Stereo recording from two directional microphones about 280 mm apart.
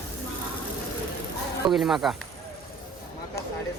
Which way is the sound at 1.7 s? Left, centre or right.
Centre.